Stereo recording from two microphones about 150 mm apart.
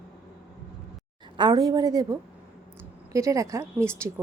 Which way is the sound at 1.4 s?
30° right (ahead or behind).